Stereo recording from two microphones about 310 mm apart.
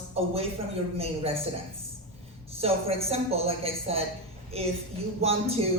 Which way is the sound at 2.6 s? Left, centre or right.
Centre.